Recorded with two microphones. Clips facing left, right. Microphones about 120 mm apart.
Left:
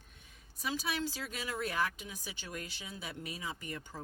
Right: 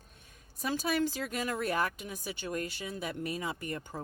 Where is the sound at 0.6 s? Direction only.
50° right (ahead or behind).